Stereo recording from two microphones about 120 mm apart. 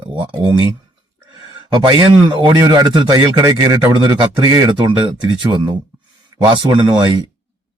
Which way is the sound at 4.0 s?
40° right (ahead or behind).